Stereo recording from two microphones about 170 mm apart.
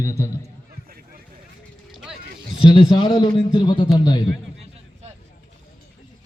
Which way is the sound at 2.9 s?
30° left (ahead or behind).